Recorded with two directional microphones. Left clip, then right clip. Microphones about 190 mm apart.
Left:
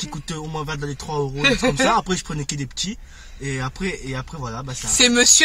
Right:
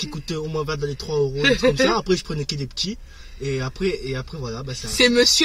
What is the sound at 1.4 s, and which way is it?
Speech, 15° left (ahead or behind).